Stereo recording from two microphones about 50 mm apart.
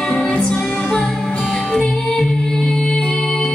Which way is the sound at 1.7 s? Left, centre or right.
Centre.